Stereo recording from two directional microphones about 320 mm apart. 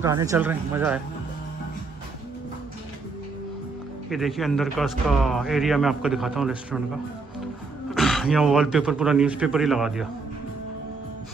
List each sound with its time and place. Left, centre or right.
0.0 s speech: centre
4.1 s a man's voice: centre
7.9 s a man's voice: centre